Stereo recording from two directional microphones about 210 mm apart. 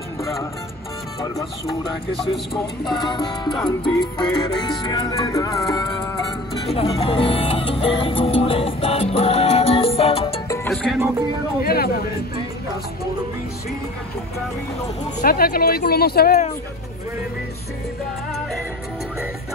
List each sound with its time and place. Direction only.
0.2 s speech: 15° left (ahead or behind)
2.8 s music: 20° left (ahead or behind)
10.5 s music: 10° left (ahead or behind)
11.6 s a sound: 45° left (ahead or behind)
15.2 s speech: 45° left (ahead or behind)